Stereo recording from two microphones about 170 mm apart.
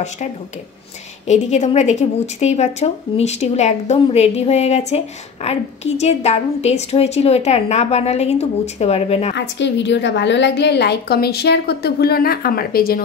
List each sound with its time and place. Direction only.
1.2 s a woman's voice: 40° left (ahead or behind)
9.3 s a woman's voice: 90° left; by 13.0 s 60° left (ahead or behind)